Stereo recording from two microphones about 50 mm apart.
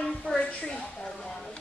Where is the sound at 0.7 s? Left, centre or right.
Centre.